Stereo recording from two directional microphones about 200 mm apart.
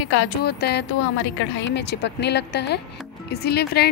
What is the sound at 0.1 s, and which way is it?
A woman's voice, 60° left (ahead or behind).